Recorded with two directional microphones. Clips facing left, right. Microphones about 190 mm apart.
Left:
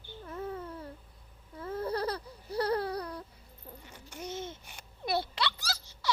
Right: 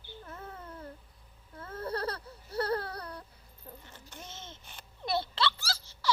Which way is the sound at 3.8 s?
10° left (ahead or behind).